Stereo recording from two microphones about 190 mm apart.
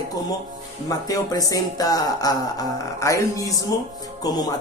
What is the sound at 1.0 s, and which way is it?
Speech, 20° left (ahead or behind).